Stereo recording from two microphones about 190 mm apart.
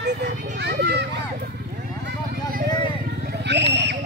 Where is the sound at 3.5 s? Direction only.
65° right (ahead or behind).